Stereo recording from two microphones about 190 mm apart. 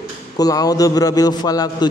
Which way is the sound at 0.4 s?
20° left (ahead or behind).